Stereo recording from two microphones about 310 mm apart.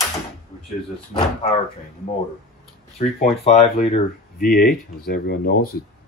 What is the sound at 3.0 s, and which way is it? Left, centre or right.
Speech, left.